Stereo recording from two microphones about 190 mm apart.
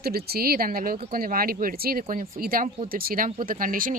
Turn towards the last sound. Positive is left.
turn(degrees=-45)  # may be behind; listen again after turning